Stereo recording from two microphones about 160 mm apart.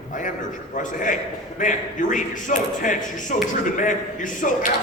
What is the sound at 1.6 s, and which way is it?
A man's voice, 55° left (ahead or behind).